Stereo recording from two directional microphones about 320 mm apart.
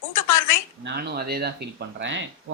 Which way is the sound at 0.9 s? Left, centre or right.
Right.